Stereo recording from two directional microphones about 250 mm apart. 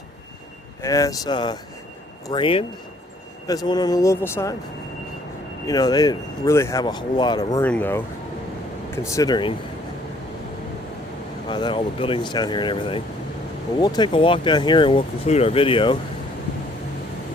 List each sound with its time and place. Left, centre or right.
0.8 s speech: centre
5.6 s speech: centre
9.0 s speech: centre
11.4 s speech: centre